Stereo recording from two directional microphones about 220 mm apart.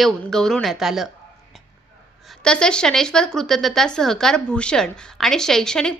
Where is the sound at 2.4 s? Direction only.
5° left (ahead or behind).